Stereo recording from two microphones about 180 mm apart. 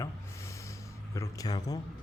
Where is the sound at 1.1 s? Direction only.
20° left (ahead or behind).